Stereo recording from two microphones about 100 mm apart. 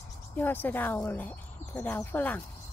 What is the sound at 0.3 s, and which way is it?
Speech, 20° left (ahead or behind).